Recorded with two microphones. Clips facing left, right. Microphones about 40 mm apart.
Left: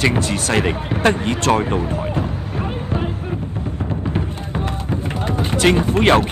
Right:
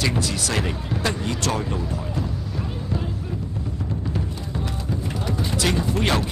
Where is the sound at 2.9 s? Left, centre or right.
Left.